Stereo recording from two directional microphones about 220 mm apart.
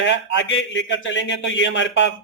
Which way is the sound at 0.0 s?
55° left (ahead or behind).